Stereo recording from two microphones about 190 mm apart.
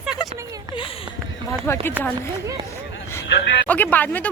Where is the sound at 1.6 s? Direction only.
10° left (ahead or behind).